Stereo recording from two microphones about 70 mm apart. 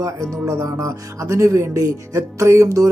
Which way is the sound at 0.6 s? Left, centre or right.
Right.